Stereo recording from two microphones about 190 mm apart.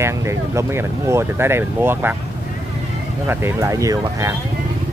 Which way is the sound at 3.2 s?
10° right (ahead or behind).